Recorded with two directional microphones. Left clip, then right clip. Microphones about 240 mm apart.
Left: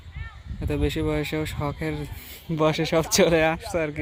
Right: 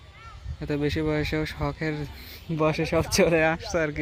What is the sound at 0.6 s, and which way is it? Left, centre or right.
Speech, centre.